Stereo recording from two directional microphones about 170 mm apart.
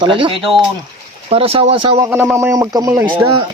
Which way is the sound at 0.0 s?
30° right (ahead or behind).